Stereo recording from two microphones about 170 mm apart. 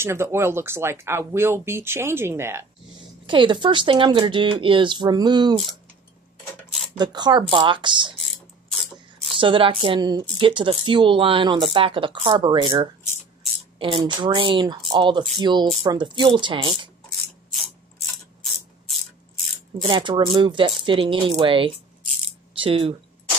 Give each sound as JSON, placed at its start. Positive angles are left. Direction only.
{"t": 0.0, "sound": "speech", "side_deg": -15}
{"t": 3.3, "sound": "speech", "side_deg": -30}
{"t": 7.0, "sound": "speech", "side_deg": -25}
{"t": 9.4, "sound": "speech", "side_deg": -30}
{"t": 17.1, "sound": "a sound", "side_deg": 0}
{"t": 19.8, "sound": "speech", "side_deg": -30}